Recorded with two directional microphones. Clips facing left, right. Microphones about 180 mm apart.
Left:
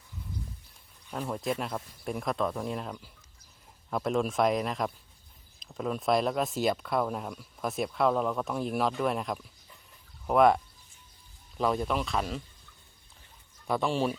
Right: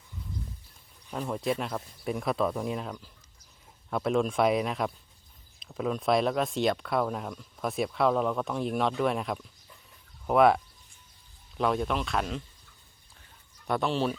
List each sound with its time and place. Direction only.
1.1 s speech: centre (ahead or behind)
13.7 s speech: 5° left (ahead or behind)